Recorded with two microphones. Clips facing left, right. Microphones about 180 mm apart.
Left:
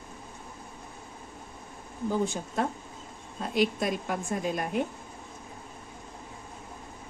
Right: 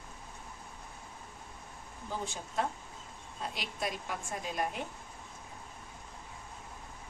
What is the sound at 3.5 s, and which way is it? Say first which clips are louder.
A woman's voice: left 14 dB; 55° left (ahead or behind).